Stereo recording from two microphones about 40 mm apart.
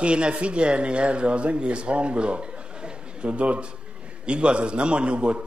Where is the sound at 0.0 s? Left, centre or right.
Right.